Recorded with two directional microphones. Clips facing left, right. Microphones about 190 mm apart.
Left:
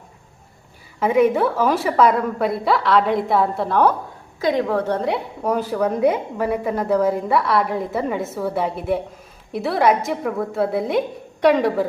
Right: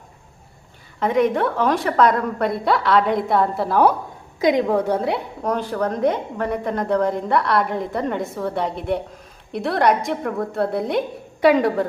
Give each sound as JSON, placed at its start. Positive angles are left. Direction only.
{"t": 0.9, "sound": "a woman's voice", "side_deg": 5}
{"t": 4.4, "sound": "a woman's voice", "side_deg": -15}
{"t": 4.9, "sound": "a woman's voice", "side_deg": 0}